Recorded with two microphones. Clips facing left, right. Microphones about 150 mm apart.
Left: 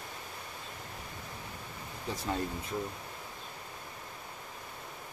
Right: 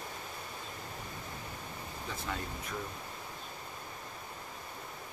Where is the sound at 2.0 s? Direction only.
35° left (ahead or behind).